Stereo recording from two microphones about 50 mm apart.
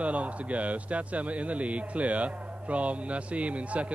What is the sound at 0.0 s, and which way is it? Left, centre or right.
Speech, right.